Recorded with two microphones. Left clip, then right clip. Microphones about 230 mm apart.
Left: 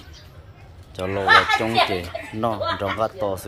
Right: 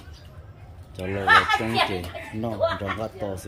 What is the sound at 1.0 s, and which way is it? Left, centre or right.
Speech, left.